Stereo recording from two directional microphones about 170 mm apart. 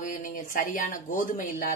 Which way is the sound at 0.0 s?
50° left (ahead or behind).